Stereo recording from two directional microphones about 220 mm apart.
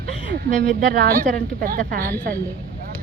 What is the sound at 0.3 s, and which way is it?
Speech, 45° right (ahead or behind).